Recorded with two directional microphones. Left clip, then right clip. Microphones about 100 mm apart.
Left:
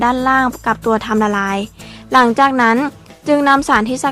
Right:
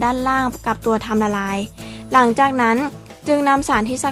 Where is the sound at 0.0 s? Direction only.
45° left (ahead or behind).